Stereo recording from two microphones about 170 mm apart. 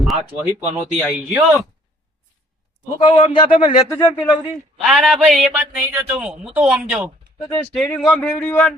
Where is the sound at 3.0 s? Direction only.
25° left (ahead or behind).